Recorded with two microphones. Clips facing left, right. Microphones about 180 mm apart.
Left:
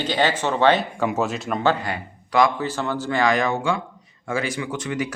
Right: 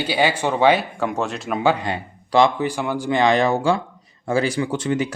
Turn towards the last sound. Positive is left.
turn(degrees=-30)  # may be behind; listen again after turning